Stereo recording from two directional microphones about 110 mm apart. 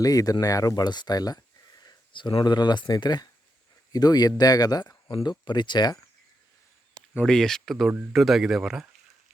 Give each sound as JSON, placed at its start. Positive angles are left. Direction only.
{"t": 0.0, "sound": "speech", "side_deg": 35}
{"t": 7.3, "sound": "speech", "side_deg": 5}